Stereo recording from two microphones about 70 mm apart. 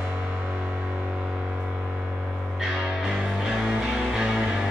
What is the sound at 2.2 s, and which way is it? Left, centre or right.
Music, centre.